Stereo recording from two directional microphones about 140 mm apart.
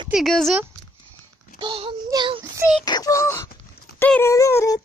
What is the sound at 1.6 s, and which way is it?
Child singing, 35° right (ahead or behind).